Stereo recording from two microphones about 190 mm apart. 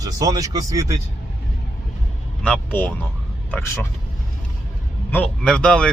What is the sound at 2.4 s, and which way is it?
Speech, 5° left (ahead or behind).